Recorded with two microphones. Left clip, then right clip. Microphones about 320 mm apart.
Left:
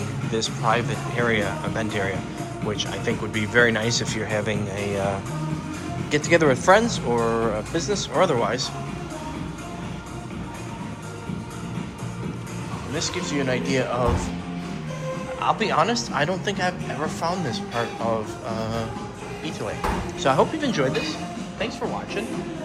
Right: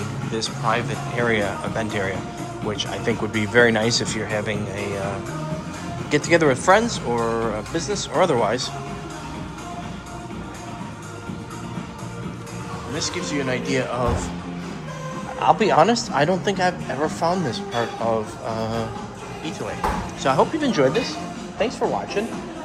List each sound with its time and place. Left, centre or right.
0.3 s speech: centre
6.1 s speech: centre
13.0 s speech: centre
15.4 s a man's voice: right
20.2 s a man's voice: centre